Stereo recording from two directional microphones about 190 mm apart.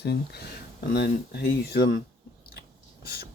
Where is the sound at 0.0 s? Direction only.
60° left (ahead or behind).